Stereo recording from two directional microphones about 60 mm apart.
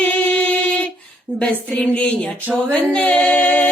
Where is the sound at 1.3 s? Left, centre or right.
Right.